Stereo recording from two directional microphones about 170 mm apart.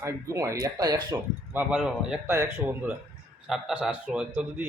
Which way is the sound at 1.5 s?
5° right (ahead or behind).